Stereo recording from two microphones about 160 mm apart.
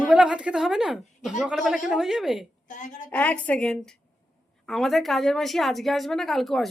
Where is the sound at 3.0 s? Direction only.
10° left (ahead or behind).